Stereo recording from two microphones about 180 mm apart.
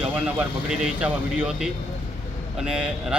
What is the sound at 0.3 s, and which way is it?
Speech, 5° right (ahead or behind).